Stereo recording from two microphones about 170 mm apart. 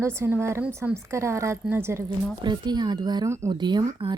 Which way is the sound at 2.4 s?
25° right (ahead or behind).